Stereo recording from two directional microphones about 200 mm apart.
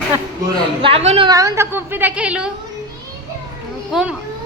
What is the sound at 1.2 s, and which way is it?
A woman's voice, 15° right (ahead or behind).